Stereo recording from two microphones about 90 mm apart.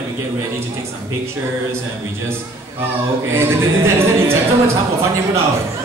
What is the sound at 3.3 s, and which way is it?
Speech, 30° right (ahead or behind).